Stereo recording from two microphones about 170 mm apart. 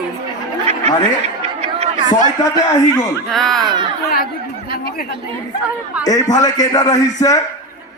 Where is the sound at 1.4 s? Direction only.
40° right (ahead or behind).